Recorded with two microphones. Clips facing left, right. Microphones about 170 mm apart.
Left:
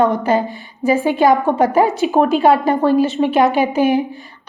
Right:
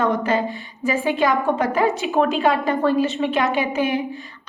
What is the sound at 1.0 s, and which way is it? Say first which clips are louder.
A woman's voice: left 4 dB; 35° left (ahead or behind).